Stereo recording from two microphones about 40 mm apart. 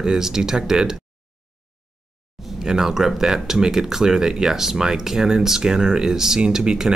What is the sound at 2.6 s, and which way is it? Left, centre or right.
Speech, centre.